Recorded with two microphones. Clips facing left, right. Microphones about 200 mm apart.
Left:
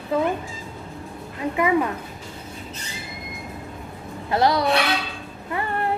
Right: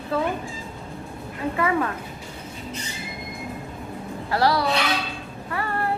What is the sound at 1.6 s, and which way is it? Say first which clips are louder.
Speech: left 3 dB; 15° left (ahead or behind).